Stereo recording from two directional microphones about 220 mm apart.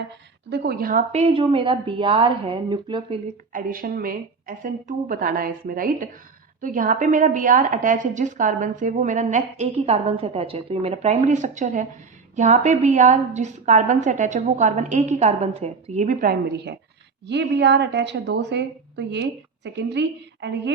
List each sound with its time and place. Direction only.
0.5 s a woman's voice: 45° right (ahead or behind); by 3.2 s 20° right (ahead or behind)
3.5 s a woman's voice: 40° right (ahead or behind)